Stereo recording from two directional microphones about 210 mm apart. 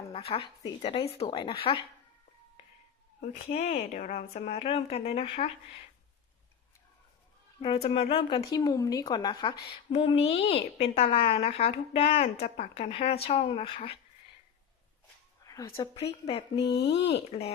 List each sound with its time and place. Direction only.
0.1 s speech: 25° left (ahead or behind)
3.2 s speech: 35° left (ahead or behind)
7.6 s speech: 25° left (ahead or behind)
15.4 s speech: 15° left (ahead or behind)
16.6 s speech: 55° left (ahead or behind)